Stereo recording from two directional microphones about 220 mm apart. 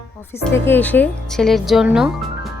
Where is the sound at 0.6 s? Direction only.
10° left (ahead or behind).